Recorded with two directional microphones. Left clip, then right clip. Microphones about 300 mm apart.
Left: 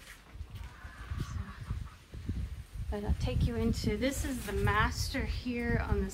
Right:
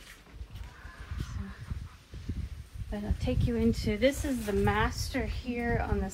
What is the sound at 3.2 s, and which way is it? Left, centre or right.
A woman's voice, centre.